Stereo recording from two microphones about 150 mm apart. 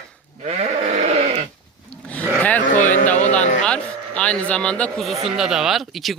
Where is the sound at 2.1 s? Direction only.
10° left (ahead or behind).